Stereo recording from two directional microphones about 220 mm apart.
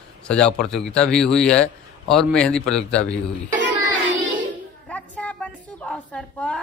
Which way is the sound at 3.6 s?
55° right (ahead or behind).